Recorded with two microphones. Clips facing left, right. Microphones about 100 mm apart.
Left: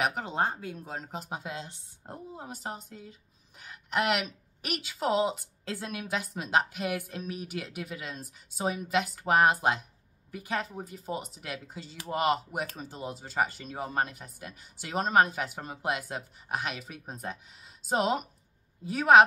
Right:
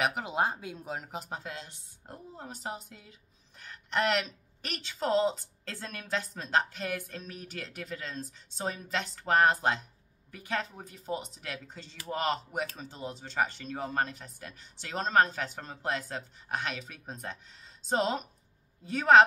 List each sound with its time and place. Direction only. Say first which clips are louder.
0.0 s speech: even; 5° right (ahead or behind)
1.0 s speech: left 1 dB; centre (ahead or behind)
1.4 s a woman's voice: left 3 dB; 20° left (ahead or behind)
2.3 s a woman's voice: right 1 dB; 5° left (ahead or behind)